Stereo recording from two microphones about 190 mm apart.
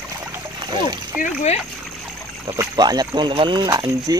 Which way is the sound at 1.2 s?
35° left (ahead or behind).